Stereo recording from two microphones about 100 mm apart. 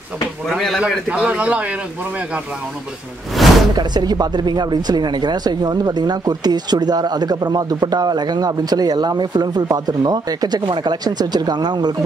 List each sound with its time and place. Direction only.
0.5 s a man's voice: centre (ahead or behind)
3.4 s a sound: centre (ahead or behind)
3.7 s speech: 45° right (ahead or behind)